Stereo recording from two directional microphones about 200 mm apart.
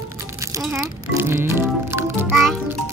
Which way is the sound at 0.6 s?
10° right (ahead or behind).